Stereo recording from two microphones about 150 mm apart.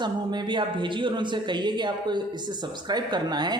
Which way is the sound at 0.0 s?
30° right (ahead or behind).